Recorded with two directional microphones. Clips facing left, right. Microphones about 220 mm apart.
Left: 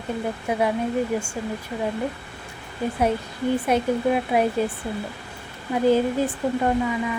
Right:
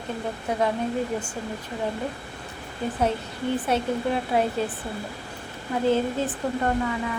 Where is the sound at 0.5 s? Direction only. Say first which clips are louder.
Left 2 dB; 10° left (ahead or behind).